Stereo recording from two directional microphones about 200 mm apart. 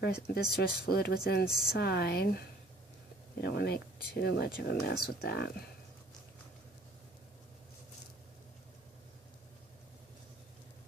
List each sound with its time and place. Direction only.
0.0 s speech: 55° left (ahead or behind)
1.5 s speech: centre (ahead or behind)
1.7 s speech: 55° left (ahead or behind)
3.4 s speech: 55° left (ahead or behind)